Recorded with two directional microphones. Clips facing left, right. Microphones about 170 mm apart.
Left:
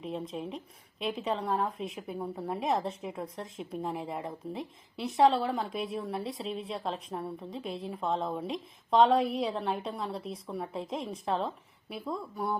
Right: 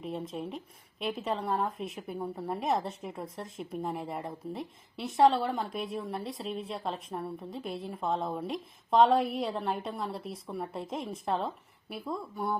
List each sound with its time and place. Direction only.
0.0 s a woman's voice: centre (ahead or behind)